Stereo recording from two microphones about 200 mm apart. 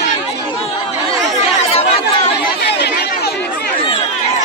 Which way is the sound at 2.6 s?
55° left (ahead or behind).